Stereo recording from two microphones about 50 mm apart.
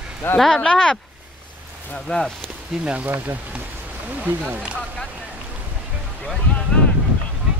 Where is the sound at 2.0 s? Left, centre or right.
Centre.